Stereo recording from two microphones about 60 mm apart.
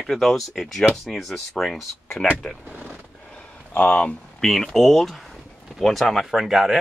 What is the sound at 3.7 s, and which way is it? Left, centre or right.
Speech, left.